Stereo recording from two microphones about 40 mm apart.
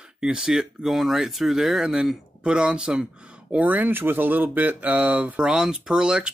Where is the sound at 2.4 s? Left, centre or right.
Right.